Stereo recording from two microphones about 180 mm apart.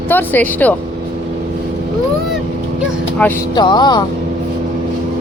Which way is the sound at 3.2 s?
5° left (ahead or behind).